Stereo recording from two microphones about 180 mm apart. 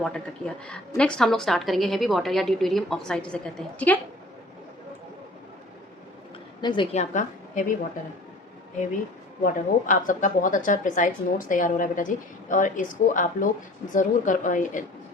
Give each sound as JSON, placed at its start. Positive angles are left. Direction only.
{"t": 0.0, "sound": "a woman's voice", "side_deg": 5}
{"t": 6.6, "sound": "a woman's voice", "side_deg": 25}
{"t": 6.9, "sound": "a woman's voice", "side_deg": 40}
{"t": 9.4, "sound": "a woman's voice", "side_deg": 45}